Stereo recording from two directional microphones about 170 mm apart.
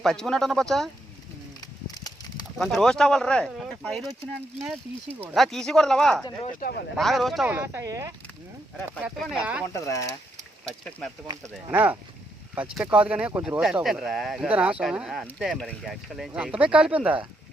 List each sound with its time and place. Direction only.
0.0 s speech: 5° left (ahead or behind)
1.6 s a sound: 25° left (ahead or behind)
2.6 s speech: centre (ahead or behind)
5.3 s speech: centre (ahead or behind)
6.6 s speech: 60° left (ahead or behind)
6.9 s speech: centre (ahead or behind)
7.4 s speech: 15° right (ahead or behind)
9.0 s speech: 5° right (ahead or behind)
9.8 s speech: 20° left (ahead or behind)
10.7 s speech: 5° left (ahead or behind)
11.3 s speech: 25° right (ahead or behind)
11.7 s speech: 10° right (ahead or behind)